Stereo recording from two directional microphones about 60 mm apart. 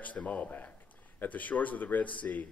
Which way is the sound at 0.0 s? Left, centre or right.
Left.